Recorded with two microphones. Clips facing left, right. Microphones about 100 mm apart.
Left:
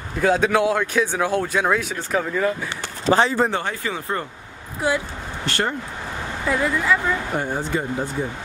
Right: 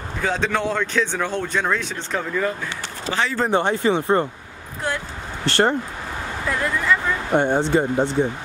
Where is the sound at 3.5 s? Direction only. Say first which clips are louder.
Right 7 dB; 25° right (ahead or behind).